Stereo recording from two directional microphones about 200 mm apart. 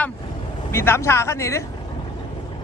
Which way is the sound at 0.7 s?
10° left (ahead or behind).